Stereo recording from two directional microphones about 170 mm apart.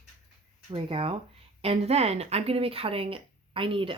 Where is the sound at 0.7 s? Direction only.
30° right (ahead or behind).